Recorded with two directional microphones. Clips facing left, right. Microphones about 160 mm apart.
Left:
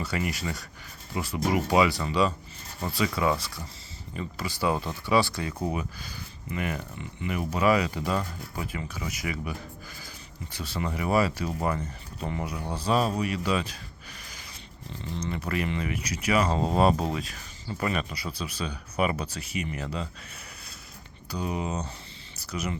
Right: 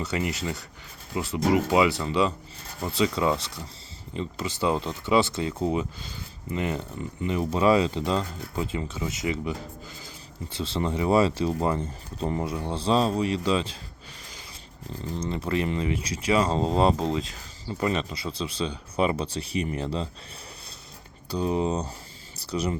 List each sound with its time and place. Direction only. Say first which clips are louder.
0.0 s speech: right 2 dB; 20° right (ahead or behind)
15.3 s speech: right 3 dB; 25° right (ahead or behind)
21.2 s speech: right 6 dB; 30° right (ahead or behind)